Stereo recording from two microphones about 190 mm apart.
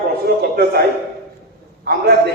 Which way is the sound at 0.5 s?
55° right (ahead or behind).